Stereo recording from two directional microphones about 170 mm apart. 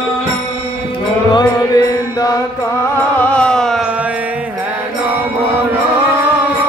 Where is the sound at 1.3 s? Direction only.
25° left (ahead or behind).